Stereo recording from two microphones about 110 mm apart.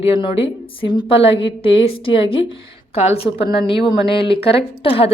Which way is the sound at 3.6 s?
55° left (ahead or behind).